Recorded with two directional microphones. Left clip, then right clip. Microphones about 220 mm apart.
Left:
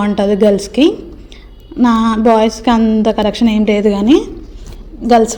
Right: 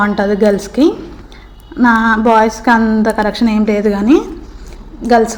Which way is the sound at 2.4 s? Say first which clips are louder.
Right 2 dB; 35° left (ahead or behind).